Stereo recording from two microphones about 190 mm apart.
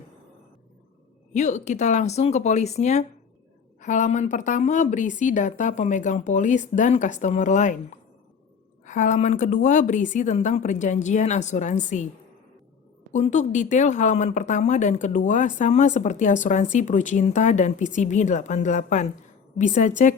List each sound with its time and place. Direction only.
1.3 s speech: 40° left (ahead or behind)
13.1 s speech: 40° left (ahead or behind)